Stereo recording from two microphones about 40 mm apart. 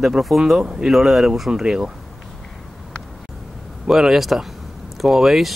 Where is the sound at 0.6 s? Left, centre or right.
Centre.